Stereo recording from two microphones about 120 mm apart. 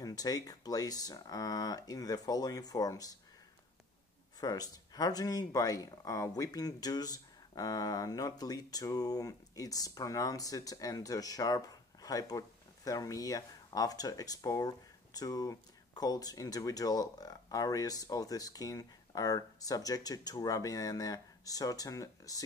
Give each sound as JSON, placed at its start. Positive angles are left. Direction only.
{"t": 0.0, "sound": "speech", "side_deg": 30}
{"t": 4.4, "sound": "speech", "side_deg": 30}